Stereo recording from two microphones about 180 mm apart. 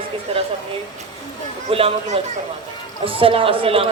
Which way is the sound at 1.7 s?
30° right (ahead or behind).